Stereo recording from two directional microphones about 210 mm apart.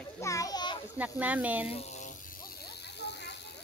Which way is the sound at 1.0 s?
5° right (ahead or behind).